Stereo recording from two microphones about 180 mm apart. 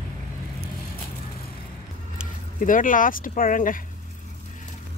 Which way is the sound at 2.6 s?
50° left (ahead or behind).